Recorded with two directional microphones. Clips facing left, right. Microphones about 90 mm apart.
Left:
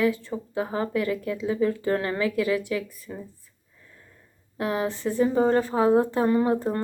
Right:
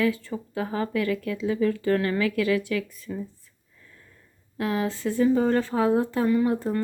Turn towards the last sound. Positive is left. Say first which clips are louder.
# even
turn(degrees=30)  # may be behind; listen again after turning